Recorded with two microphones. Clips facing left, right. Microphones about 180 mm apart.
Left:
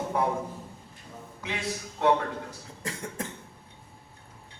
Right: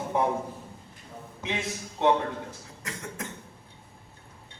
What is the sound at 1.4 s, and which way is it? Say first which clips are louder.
Speech: right 1 dB; 20° right (ahead or behind).